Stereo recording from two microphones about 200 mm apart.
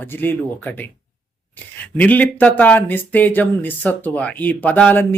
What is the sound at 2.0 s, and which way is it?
Speech, 10° left (ahead or behind).